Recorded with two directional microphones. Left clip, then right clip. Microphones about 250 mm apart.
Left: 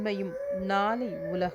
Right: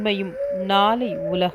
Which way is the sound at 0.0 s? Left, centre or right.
Centre.